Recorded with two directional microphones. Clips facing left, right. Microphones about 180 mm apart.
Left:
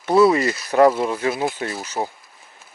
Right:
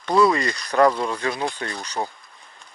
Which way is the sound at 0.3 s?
5° left (ahead or behind).